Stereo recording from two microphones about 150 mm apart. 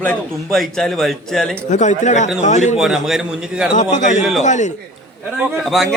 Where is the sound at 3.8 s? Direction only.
55° left (ahead or behind).